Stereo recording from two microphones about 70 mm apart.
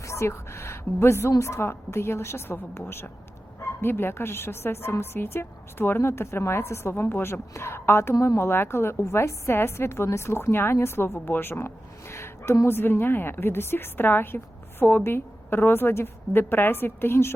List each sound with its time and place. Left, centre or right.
0.0 s a woman's voice: left